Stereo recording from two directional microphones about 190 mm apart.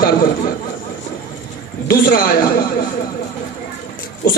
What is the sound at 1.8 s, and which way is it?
Speech, 50° left (ahead or behind).